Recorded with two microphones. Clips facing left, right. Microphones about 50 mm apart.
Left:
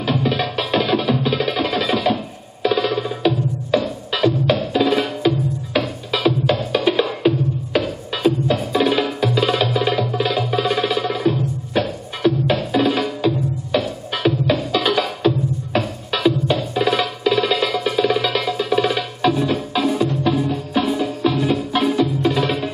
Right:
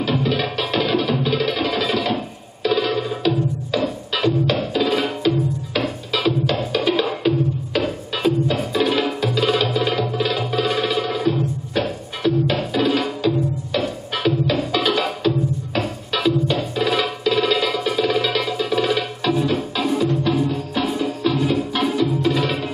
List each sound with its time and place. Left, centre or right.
0.2 s music: centre
9.9 s tabla: centre
10.5 s music: centre